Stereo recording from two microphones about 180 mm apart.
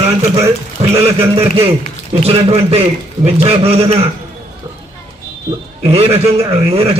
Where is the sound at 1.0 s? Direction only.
35° right (ahead or behind).